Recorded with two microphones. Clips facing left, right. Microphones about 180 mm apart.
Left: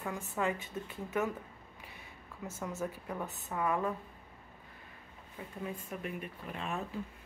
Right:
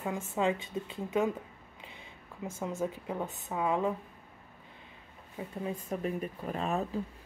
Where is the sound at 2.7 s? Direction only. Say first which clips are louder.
Right 4 dB; 25° right (ahead or behind).